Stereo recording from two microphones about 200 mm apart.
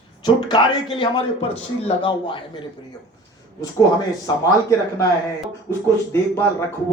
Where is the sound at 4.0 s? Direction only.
20° left (ahead or behind).